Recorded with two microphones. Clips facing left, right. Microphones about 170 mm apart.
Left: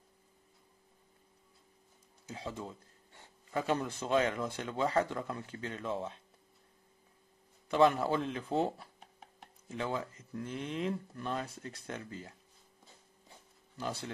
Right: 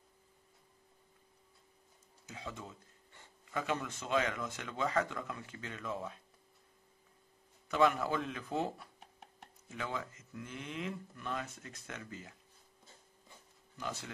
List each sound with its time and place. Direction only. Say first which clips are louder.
2.2 s speech: left 5 dB; 30° left (ahead or behind)
7.6 s speech: left 3 dB; 30° left (ahead or behind)
13.7 s speech: left 4 dB; 35° left (ahead or behind)